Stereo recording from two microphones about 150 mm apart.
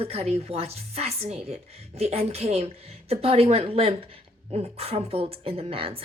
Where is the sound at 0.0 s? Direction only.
40° right (ahead or behind).